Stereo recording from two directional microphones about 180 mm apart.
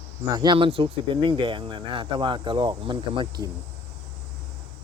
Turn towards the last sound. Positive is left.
turn(degrees=-25)  # may be behind; listen again after turning